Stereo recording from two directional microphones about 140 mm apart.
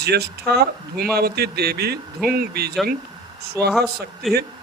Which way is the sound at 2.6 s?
90° right.